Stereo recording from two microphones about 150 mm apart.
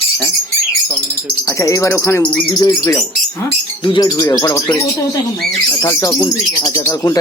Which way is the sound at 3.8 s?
30° left (ahead or behind).